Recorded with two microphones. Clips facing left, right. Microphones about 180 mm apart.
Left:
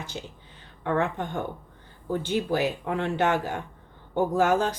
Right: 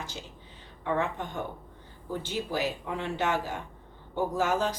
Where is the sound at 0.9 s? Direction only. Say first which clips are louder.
Left 3 dB; 55° left (ahead or behind).